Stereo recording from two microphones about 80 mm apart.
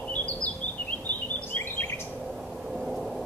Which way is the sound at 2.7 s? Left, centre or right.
Centre.